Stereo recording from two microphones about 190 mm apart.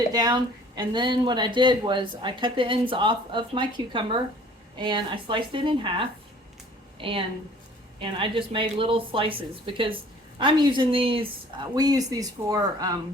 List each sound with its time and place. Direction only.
0.1 s speech: 20° right (ahead or behind)